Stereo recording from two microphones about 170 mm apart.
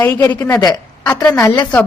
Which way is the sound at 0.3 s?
20° left (ahead or behind).